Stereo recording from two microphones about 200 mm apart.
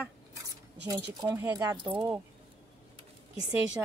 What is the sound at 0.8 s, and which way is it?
Speech, 20° right (ahead or behind).